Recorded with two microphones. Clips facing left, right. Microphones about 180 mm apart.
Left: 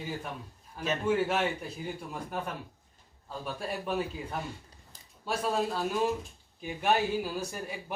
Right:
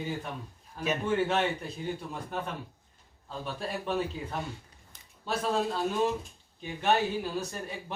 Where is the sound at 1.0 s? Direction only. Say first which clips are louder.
Even; 5° left (ahead or behind).